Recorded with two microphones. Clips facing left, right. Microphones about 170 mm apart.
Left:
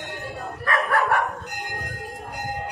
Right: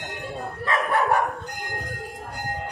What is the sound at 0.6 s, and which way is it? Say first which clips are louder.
Dog: left 1 dB; 20° right (ahead or behind).